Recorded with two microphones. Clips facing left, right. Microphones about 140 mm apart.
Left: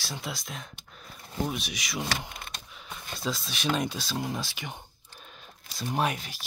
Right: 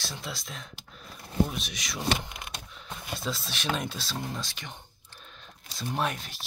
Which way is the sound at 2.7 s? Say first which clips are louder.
Right 4 dB; centre (ahead or behind).